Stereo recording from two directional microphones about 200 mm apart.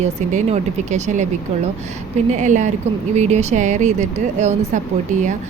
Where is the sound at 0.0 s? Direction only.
35° right (ahead or behind).